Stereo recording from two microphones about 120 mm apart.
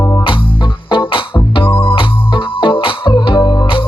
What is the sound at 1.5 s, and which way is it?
Music, 45° left (ahead or behind).